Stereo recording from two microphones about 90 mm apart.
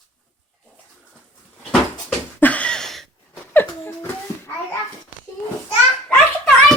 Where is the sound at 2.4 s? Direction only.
15° left (ahead or behind).